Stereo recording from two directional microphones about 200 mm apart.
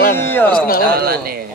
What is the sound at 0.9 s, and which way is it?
Speech, 50° right (ahead or behind).